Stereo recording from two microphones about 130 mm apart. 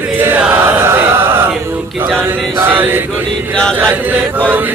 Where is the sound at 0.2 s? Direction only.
15° right (ahead or behind).